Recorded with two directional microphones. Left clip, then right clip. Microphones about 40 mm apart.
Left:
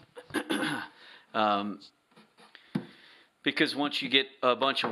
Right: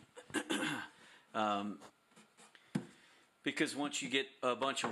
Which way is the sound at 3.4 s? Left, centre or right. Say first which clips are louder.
Left 9 dB; left.